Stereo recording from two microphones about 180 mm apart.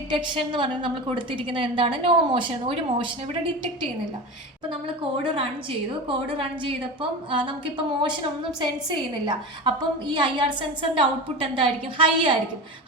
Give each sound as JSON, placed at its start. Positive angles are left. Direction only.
{"t": 0.3, "sound": "a woman's voice", "side_deg": -25}
{"t": 5.2, "sound": "a woman's voice", "side_deg": -30}